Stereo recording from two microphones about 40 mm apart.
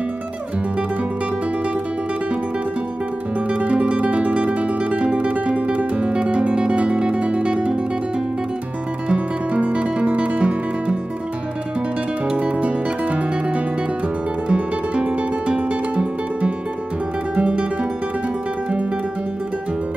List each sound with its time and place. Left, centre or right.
3.4 s music: right
9.1 s music: right
12.4 s music: right
14.5 s music: right
17.4 s guitar: right